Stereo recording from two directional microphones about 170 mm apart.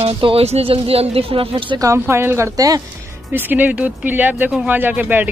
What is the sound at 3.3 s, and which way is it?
A woman's voice, 10° right (ahead or behind).